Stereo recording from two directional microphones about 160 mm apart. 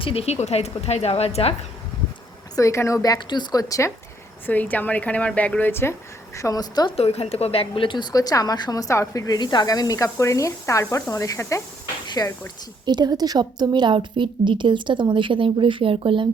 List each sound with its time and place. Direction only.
0.0 s a woman's voice: 35° left (ahead or behind)
2.6 s a woman's voice: 20° left (ahead or behind)
6.9 s a woman's voice: 40° left (ahead or behind); by 11.6 s 20° left (ahead or behind)
12.0 s a sound: 25° left (ahead or behind)
12.8 s a woman's voice: 25° right (ahead or behind)